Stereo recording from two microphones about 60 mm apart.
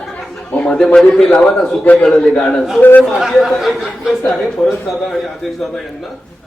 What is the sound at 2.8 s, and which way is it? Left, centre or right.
Speech, left.